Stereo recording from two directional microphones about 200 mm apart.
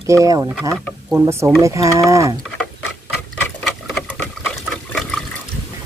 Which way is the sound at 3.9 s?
5° left (ahead or behind).